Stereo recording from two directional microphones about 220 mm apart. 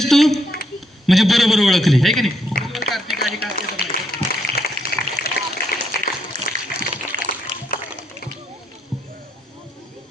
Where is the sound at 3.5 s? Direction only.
45° left (ahead or behind).